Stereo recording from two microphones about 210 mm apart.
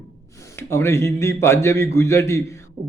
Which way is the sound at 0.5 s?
10° left (ahead or behind).